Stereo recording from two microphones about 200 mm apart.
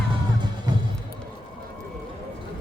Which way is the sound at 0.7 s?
20° right (ahead or behind).